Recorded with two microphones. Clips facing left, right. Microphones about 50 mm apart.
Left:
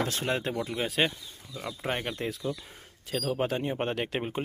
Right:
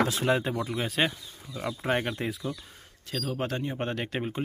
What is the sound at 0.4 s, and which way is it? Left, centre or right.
Speech, centre.